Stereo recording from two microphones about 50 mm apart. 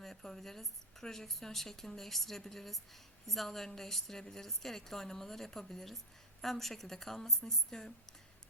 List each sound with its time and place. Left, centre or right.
0.0 s a woman's voice: centre